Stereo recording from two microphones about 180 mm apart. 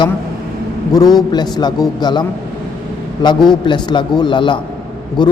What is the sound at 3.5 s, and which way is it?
A man's voice, 25° left (ahead or behind).